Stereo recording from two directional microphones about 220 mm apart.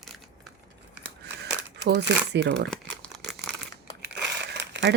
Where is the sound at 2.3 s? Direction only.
50° right (ahead or behind).